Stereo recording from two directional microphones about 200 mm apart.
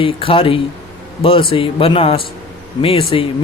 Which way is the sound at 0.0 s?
25° left (ahead or behind).